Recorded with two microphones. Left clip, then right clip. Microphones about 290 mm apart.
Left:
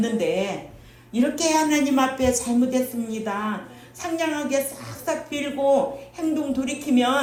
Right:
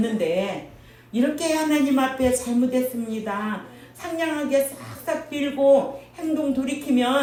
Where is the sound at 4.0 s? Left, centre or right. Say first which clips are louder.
Left 1 dB; left.